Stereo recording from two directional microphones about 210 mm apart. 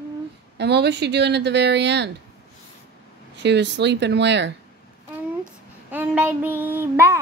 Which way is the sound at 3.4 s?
55° right (ahead or behind).